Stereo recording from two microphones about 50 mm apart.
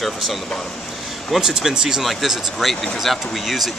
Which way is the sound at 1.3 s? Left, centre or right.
Centre.